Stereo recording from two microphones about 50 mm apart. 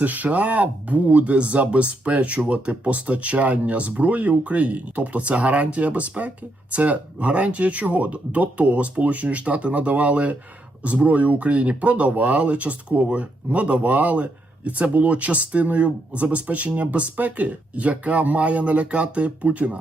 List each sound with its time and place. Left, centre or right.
0.0 s speech: right